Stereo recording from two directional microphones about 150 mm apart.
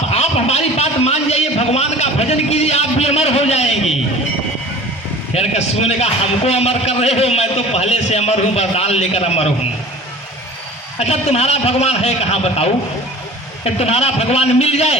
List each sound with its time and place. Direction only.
0.1 s a sound: 45° left (ahead or behind)
5.3 s a man's voice: 45° left (ahead or behind)
11.0 s a man's voice: 45° left (ahead or behind)